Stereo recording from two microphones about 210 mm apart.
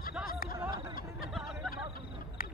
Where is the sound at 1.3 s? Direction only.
Centre (ahead or behind).